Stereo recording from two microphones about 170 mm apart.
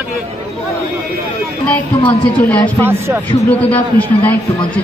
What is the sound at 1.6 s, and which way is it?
Speech, 10° left (ahead or behind).